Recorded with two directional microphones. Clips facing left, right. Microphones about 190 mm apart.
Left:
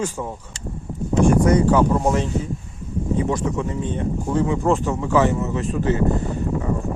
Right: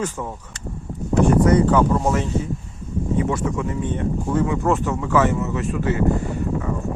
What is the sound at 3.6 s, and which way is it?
Speech, 25° left (ahead or behind).